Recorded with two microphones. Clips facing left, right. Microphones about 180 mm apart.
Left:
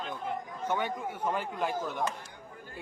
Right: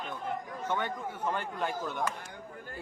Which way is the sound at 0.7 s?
10° left (ahead or behind).